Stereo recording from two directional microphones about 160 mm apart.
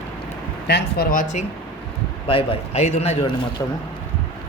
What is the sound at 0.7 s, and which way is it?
Speech, 85° left.